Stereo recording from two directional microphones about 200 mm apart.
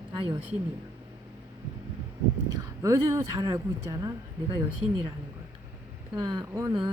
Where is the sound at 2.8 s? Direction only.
15° right (ahead or behind).